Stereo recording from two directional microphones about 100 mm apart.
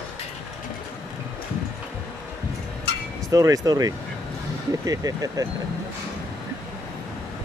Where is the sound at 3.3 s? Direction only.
35° right (ahead or behind).